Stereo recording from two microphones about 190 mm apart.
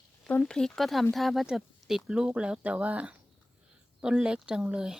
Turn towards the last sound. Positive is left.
turn(degrees=-5)  # may be behind; listen again after turning